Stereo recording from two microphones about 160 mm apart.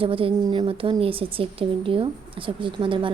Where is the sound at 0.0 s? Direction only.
35° right (ahead or behind).